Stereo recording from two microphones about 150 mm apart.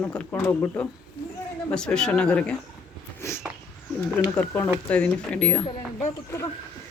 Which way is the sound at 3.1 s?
15° left (ahead or behind).